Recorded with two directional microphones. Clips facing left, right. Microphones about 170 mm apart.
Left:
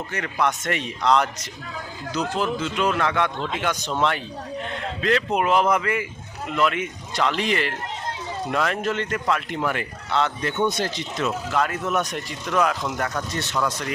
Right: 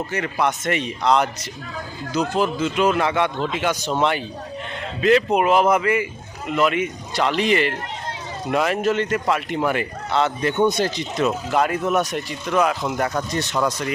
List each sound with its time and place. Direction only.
0.1 s a man's voice: 5° right (ahead or behind)
4.9 s a man's voice: 10° right (ahead or behind)
13.3 s speech: 15° right (ahead or behind)